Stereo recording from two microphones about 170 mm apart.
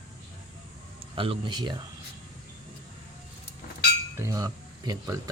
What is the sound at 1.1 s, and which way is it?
Speech, 30° right (ahead or behind).